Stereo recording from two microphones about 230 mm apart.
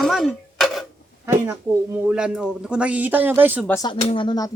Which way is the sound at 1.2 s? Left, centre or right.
Centre.